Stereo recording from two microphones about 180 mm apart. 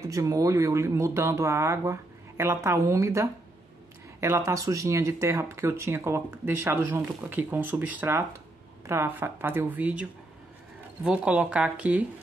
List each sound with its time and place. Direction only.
0.1 s speech: 20° right (ahead or behind)
11.1 s speech: 5° right (ahead or behind)